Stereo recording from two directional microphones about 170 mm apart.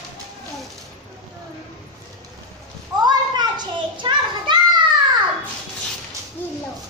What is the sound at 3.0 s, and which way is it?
Children playing, 25° right (ahead or behind).